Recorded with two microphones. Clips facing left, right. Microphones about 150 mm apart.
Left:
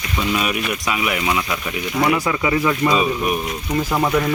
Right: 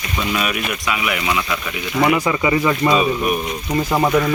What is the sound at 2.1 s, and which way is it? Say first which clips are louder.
Speech: right 2 dB; 5° right (ahead or behind).